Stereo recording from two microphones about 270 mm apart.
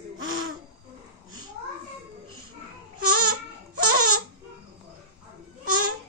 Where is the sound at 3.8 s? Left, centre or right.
Right.